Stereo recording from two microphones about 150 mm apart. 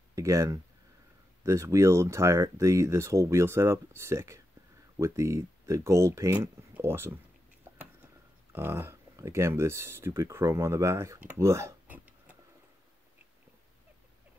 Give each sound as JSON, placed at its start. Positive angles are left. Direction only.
{"t": 0.1, "sound": "speech", "side_deg": -20}
{"t": 8.5, "sound": "speech", "side_deg": -15}